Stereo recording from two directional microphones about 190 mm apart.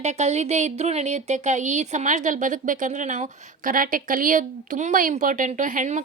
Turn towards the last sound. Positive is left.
turn(degrees=-40)  # may be behind; listen again after turning